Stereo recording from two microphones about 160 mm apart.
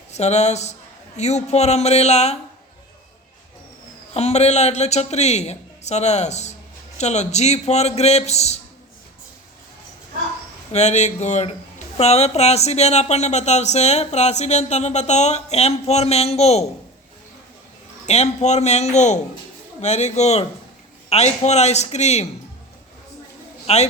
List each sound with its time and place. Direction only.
0.1 s speech: 45° left (ahead or behind)
4.1 s speech: 40° left (ahead or behind)
10.7 s speech: 45° left (ahead or behind)
18.0 s speech: 45° left (ahead or behind)
23.6 s a man's voice: 45° left (ahead or behind)